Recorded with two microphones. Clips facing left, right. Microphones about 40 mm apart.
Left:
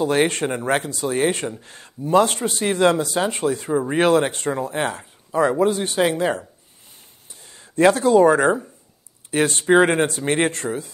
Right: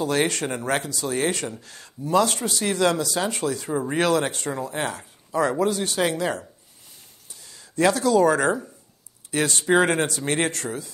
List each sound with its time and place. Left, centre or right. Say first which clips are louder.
0.0 s speech: left 4 dB; left
3.7 s speech: left 4 dB; centre
4.0 s speech: left 5 dB; left